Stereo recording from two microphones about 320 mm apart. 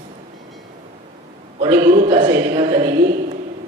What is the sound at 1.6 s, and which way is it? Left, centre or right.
A woman's voice, centre.